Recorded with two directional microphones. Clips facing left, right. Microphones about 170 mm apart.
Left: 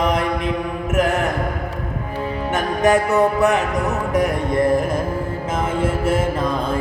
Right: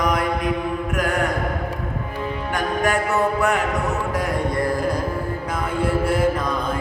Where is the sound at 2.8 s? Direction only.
20° left (ahead or behind).